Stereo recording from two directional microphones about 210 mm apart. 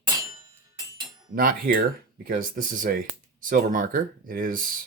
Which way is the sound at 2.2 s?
40° right (ahead or behind).